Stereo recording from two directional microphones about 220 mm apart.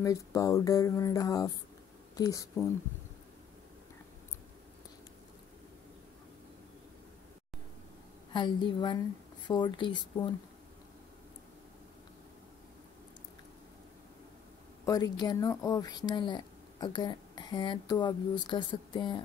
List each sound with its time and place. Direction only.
0.0 s speech: 15° left (ahead or behind)
8.3 s speech: 20° left (ahead or behind)
14.9 s speech: 15° left (ahead or behind)